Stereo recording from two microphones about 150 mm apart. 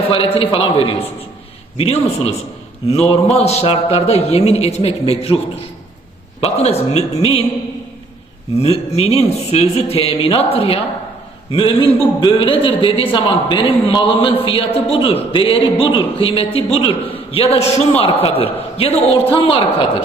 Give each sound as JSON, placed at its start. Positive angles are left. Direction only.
{"t": 0.3, "sound": "a man's voice", "side_deg": 35}
{"t": 6.4, "sound": "a man's voice", "side_deg": 45}
{"t": 8.5, "sound": "a man's voice", "side_deg": 45}